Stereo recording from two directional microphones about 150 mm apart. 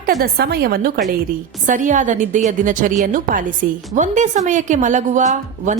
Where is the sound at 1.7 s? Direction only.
60° right (ahead or behind).